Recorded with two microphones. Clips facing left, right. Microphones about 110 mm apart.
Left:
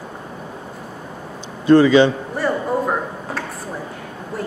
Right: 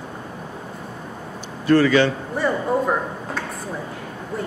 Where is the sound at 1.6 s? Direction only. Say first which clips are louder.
Left 4 dB; 20° left (ahead or behind).